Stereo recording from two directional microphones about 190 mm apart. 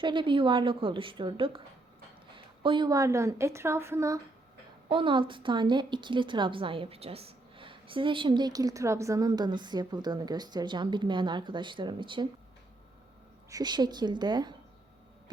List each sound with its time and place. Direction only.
0.0 s a woman's voice: 25° right (ahead or behind)
4.9 s a woman's voice: 25° right (ahead or behind)
13.5 s a woman's voice: 20° right (ahead or behind)